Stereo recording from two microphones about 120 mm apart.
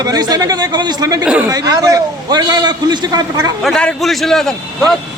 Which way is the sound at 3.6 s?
5° left (ahead or behind).